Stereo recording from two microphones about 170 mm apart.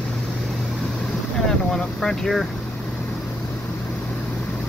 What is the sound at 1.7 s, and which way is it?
Speech, 5° left (ahead or behind).